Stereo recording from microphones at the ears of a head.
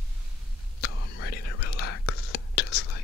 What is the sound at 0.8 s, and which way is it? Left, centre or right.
Whispering, left.